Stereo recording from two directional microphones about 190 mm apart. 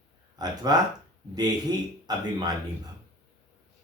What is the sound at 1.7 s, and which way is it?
Speech, 20° right (ahead or behind).